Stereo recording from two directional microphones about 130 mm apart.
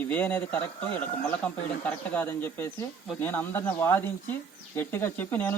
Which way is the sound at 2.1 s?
15° left (ahead or behind).